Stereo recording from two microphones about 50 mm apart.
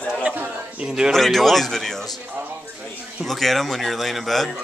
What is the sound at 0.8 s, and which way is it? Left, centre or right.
Speech, centre.